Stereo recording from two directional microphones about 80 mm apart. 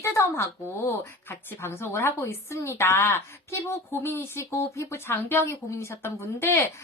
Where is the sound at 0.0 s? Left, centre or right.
Left.